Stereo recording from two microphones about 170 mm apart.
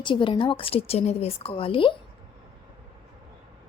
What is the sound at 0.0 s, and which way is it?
A woman's voice, 30° left (ahead or behind).